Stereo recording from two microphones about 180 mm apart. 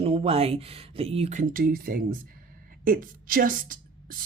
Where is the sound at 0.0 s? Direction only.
30° right (ahead or behind).